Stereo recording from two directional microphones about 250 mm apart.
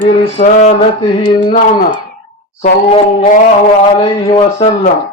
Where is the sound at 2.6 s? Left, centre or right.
Left.